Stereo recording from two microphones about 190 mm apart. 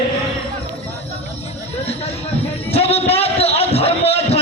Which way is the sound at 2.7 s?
30° left (ahead or behind).